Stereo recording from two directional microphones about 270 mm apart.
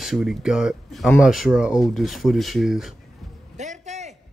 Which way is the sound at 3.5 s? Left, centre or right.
Right.